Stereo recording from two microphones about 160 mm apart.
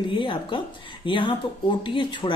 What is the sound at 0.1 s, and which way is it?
Speech, 30° left (ahead or behind).